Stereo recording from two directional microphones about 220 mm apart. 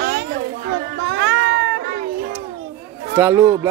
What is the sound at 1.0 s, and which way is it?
Music, 55° right (ahead or behind).